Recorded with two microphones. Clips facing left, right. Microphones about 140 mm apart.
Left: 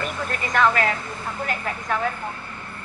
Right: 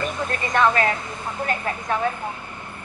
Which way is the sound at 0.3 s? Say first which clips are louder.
Even; 20° right (ahead or behind).